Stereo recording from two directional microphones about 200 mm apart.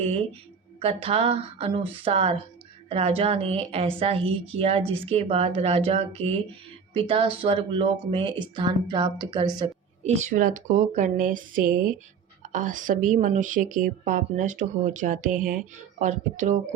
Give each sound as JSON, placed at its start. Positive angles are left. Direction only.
{"t": 0.8, "sound": "a woman's voice", "side_deg": -30}
{"t": 10.0, "sound": "speech", "side_deg": -35}